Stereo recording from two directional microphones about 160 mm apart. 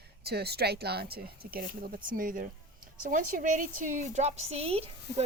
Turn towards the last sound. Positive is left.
turn(degrees=-40)  # may be behind; listen again after turning